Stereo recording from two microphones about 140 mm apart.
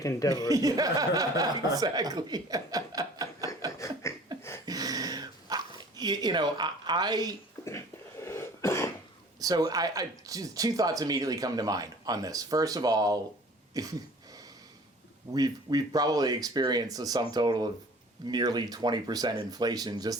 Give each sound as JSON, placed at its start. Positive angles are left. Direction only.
{"t": 0.4, "sound": "speech", "side_deg": -25}
{"t": 3.7, "sound": "a sound", "side_deg": 20}
{"t": 4.3, "sound": "a sound", "side_deg": -30}
{"t": 4.6, "sound": "dog", "side_deg": -25}
{"t": 8.2, "sound": "cough", "side_deg": 20}
{"t": 9.4, "sound": "speech", "side_deg": -25}
{"t": 15.3, "sound": "speech", "side_deg": -25}